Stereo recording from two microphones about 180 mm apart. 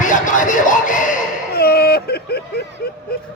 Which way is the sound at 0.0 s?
45° left (ahead or behind).